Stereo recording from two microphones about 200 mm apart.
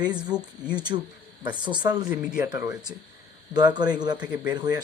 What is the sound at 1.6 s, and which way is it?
Speech, 20° right (ahead or behind).